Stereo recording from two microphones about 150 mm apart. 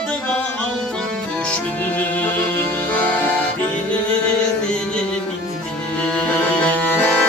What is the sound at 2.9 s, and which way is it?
Music, 10° left (ahead or behind).